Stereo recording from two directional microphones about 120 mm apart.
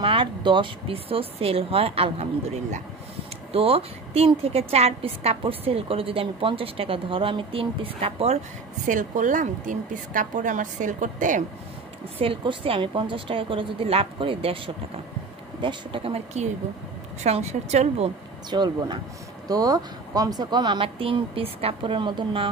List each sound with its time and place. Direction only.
0.0 s a woman's voice: 45° right (ahead or behind); by 2.8 s 65° right (ahead or behind)
3.5 s a woman's voice: 55° right (ahead or behind)
8.8 s a woman's voice: 90° right
12.2 s a woman's voice: 50° right (ahead or behind)
15.6 s a woman's voice: 50° right (ahead or behind)
17.2 s a woman's voice: 65° right (ahead or behind)
18.5 s speech: 35° right (ahead or behind)